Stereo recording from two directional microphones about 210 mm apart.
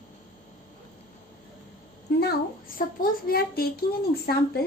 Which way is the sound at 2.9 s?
45° left (ahead or behind).